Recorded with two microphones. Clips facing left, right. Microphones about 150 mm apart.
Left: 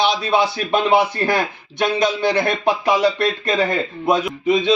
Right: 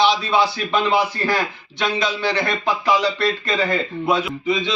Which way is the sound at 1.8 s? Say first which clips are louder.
Left 4 dB; 50° left (ahead or behind).